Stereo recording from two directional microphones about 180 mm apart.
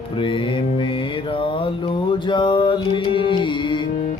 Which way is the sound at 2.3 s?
25° left (ahead or behind).